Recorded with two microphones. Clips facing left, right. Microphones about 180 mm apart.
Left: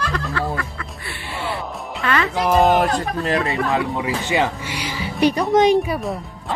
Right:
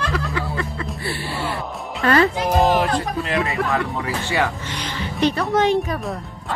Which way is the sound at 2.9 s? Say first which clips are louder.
Left 1 dB; 40° left (ahead or behind).